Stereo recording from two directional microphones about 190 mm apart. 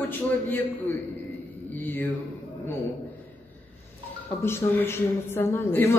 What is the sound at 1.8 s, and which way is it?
Speech, 10° left (ahead or behind).